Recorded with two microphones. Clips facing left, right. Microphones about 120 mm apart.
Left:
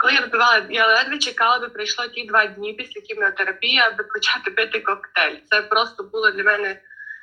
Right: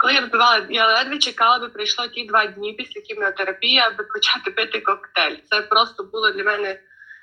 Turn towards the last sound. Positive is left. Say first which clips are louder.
# even
turn(degrees=-20)  # may be behind; listen again after turning